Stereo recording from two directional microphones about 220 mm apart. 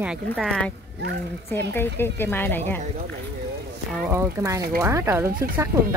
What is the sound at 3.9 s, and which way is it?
Speech, 10° right (ahead or behind).